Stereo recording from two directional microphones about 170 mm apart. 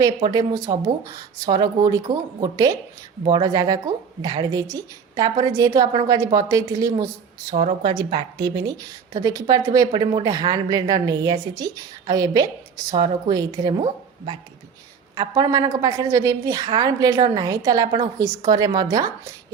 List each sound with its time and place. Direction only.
0.2 s a woman's voice: 25° right (ahead or behind)
7.5 s a woman's voice: 40° right (ahead or behind); by 19.3 s 20° right (ahead or behind)